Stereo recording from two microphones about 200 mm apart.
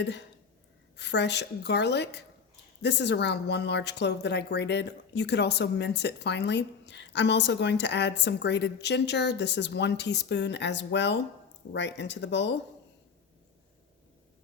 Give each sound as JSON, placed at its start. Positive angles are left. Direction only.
{"t": 0.0, "sound": "a woman's voice", "side_deg": 60}